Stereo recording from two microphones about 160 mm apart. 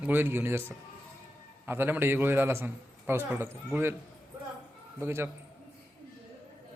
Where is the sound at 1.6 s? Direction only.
15° right (ahead or behind).